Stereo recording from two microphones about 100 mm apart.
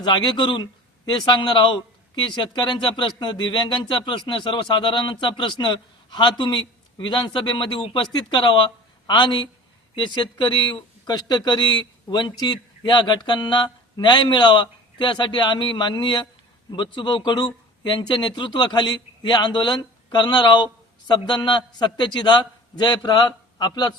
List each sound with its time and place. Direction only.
0.0 s speech: 50° left (ahead or behind)